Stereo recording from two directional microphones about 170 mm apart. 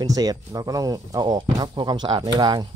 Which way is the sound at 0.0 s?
20° right (ahead or behind).